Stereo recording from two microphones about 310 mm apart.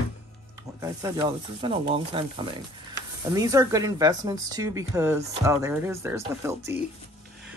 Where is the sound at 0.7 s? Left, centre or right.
Centre.